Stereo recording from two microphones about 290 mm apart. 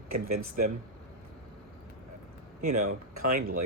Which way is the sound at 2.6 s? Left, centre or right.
Right.